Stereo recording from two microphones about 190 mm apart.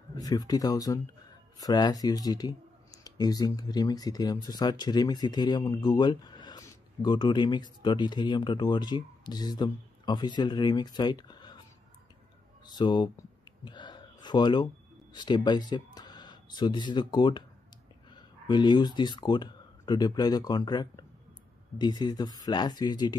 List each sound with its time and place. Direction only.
0.1 s speech: 20° left (ahead or behind)
12.7 s speech: 25° left (ahead or behind)
13.7 s a sound: 25° left (ahead or behind)
15.1 s speech: 20° left (ahead or behind)